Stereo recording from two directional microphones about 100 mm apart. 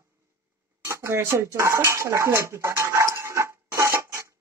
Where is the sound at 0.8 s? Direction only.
30° right (ahead or behind).